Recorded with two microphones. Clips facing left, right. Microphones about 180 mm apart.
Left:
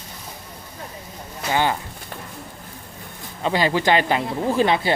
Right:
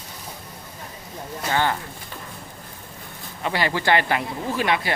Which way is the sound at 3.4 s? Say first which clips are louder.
Left 4 dB; 20° left (ahead or behind).